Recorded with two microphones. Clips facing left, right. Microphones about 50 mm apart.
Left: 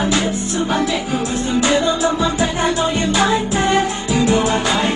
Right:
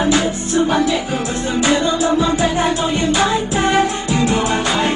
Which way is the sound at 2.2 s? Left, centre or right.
Centre.